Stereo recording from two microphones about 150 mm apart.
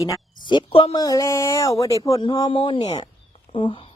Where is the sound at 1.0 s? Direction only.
25° left (ahead or behind).